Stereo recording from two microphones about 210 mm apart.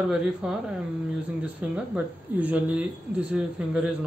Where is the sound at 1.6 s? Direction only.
5° right (ahead or behind).